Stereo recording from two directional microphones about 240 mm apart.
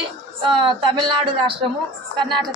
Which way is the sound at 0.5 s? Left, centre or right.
Centre.